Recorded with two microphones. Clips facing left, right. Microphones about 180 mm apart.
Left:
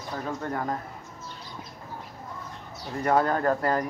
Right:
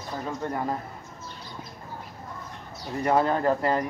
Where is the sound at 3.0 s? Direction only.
5° right (ahead or behind).